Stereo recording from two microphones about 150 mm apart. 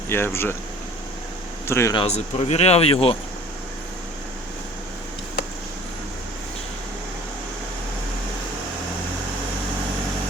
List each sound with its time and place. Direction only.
0.1 s speech: 15° left (ahead or behind)
1.6 s speech: 20° left (ahead or behind)
2.0 s speech: 45° left (ahead or behind)